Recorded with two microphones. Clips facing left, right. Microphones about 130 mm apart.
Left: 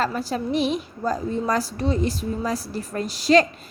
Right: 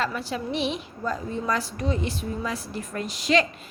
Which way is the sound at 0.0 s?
40° left (ahead or behind).